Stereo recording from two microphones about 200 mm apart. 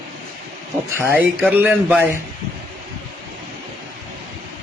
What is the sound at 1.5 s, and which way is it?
Speech, 10° right (ahead or behind).